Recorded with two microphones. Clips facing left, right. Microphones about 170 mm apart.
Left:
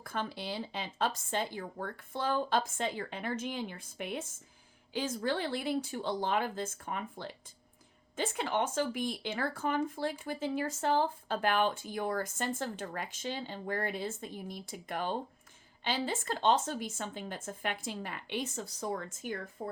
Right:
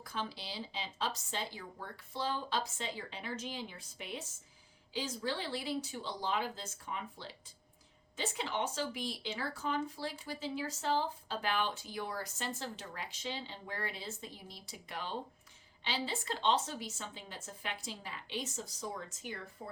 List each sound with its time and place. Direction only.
0.0 s speech: 55° left (ahead or behind)